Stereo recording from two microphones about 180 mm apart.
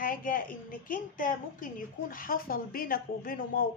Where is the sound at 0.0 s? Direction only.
50° left (ahead or behind).